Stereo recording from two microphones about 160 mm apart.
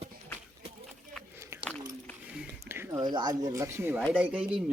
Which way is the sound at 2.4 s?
15° right (ahead or behind).